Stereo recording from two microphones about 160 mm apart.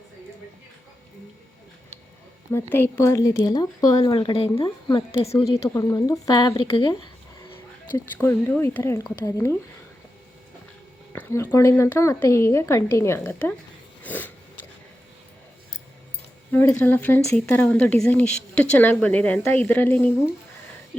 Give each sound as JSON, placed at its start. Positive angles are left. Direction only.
{"t": 2.5, "sound": "speech", "side_deg": 15}
{"t": 4.0, "sound": "speech", "side_deg": 35}
{"t": 5.6, "sound": "speech", "side_deg": 20}
{"t": 6.5, "sound": "speech", "side_deg": 35}
{"t": 7.9, "sound": "speech", "side_deg": 15}
{"t": 11.1, "sound": "speech", "side_deg": 15}
{"t": 14.0, "sound": "a sound", "side_deg": 10}
{"t": 16.5, "sound": "speech", "side_deg": 15}